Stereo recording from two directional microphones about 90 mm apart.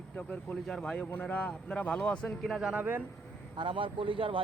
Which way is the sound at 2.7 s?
20° right (ahead or behind).